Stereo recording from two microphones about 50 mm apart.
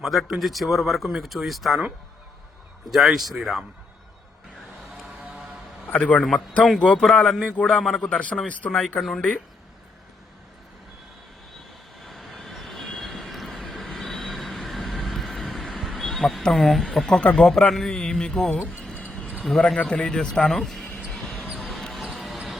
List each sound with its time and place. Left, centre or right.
0.0 s speech: centre
2.9 s speech: centre
5.9 s a man's voice: left; by 7.4 s centre
7.4 s speech: left
7.8 s a man's voice: centre
8.4 s speech: left
9.0 s a man's voice: centre
12.0 s vehicle: centre
15.7 s a sound: centre
16.4 s speech: centre
17.1 s a man's voice: centre
21.1 s basketball bounce: centre